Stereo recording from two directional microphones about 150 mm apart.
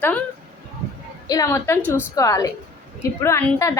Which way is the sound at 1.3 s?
20° left (ahead or behind).